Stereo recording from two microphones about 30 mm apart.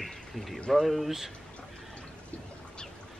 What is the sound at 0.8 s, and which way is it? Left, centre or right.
Speech, centre.